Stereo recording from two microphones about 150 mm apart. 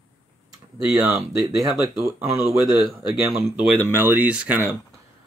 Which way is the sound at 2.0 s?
20° right (ahead or behind).